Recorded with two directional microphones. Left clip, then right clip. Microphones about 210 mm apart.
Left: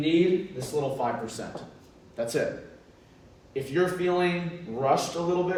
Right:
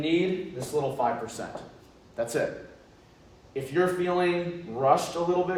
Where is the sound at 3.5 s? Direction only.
15° right (ahead or behind).